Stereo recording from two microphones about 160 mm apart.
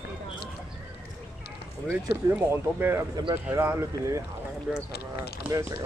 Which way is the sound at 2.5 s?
15° right (ahead or behind).